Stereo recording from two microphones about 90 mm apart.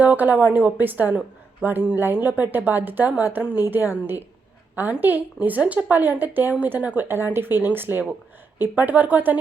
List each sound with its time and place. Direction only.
0.0 s a woman's voice: 15° right (ahead or behind)